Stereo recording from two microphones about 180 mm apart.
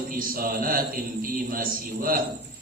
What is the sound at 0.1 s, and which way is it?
A man's voice, 50° right (ahead or behind).